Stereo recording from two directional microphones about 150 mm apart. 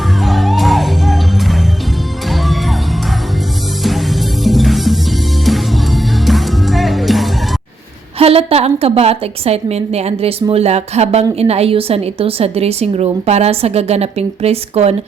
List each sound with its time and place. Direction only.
0.2 s music: centre (ahead or behind)
3.8 s music: centre (ahead or behind)
8.2 s a woman's voice: 40° right (ahead or behind)